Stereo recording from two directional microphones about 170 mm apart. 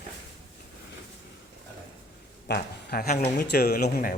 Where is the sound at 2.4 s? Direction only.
70° left (ahead or behind).